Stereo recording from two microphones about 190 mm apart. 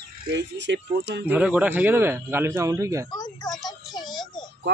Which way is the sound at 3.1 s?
20° left (ahead or behind).